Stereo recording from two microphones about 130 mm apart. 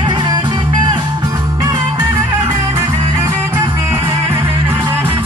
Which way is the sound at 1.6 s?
30° right (ahead or behind).